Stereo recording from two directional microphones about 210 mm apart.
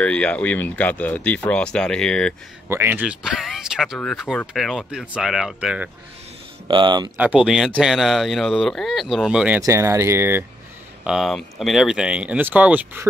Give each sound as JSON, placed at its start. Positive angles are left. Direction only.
{"t": 0.0, "sound": "speech", "side_deg": 5}
{"t": 2.7, "sound": "speech", "side_deg": -10}
{"t": 6.7, "sound": "speech", "side_deg": -20}
{"t": 7.2, "sound": "speech", "side_deg": -5}
{"t": 9.6, "sound": "speech", "side_deg": -15}
{"t": 11.1, "sound": "speech", "side_deg": 0}